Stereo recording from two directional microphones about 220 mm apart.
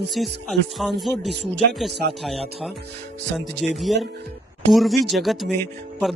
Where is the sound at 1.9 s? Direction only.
50° right (ahead or behind).